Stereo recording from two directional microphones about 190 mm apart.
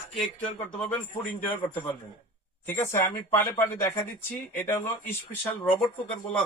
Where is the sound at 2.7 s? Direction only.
15° left (ahead or behind).